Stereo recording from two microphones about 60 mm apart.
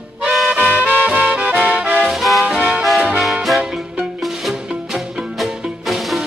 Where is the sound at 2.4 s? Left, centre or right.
Right.